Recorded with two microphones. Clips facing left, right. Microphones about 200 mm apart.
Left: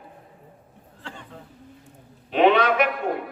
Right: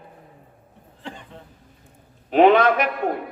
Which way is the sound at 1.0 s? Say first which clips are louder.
Right 3 dB; 15° right (ahead or behind).